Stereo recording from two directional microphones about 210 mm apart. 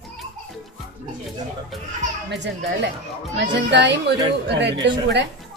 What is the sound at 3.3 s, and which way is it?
Speech, 55° right (ahead or behind).